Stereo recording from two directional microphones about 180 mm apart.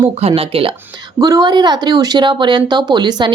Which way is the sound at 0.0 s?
30° right (ahead or behind).